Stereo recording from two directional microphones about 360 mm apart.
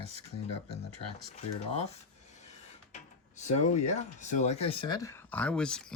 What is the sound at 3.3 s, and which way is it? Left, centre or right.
Speech, centre.